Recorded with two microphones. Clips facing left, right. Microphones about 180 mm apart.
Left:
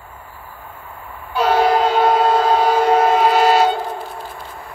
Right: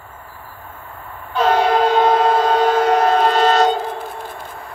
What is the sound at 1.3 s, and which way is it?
Train, 10° left (ahead or behind).